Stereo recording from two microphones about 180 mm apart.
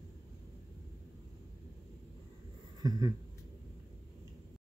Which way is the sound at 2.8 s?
20° right (ahead or behind).